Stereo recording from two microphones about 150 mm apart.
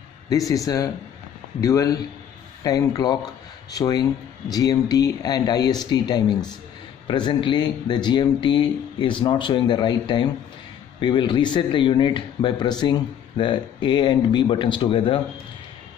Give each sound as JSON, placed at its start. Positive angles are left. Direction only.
{"t": 0.5, "sound": "speech", "side_deg": 25}